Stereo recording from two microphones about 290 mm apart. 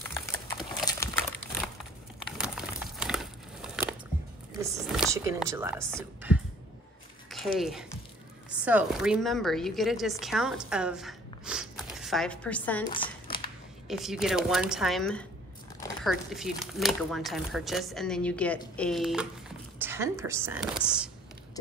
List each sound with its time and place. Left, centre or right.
0.8 s crumpling: centre
2.3 s crumpling: centre
4.6 s a woman's voice: centre
7.5 s speech: centre
12.9 s crumpling: centre
13.8 s a woman's voice: centre